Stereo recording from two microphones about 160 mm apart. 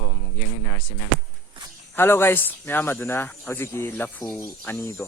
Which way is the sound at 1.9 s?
15° left (ahead or behind).